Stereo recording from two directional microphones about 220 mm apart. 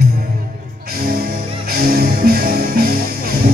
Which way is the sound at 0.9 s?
40° right (ahead or behind).